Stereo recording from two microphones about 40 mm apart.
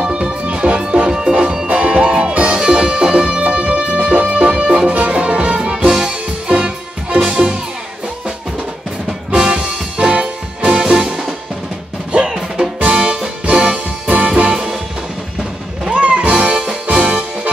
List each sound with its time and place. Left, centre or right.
0.0 s music: right
1.7 s music: right
5.8 s music: centre
9.3 s music: centre
9.9 s music: right
12.3 s music: centre
14.0 s music: right
14.4 s music: right
15.9 s music: right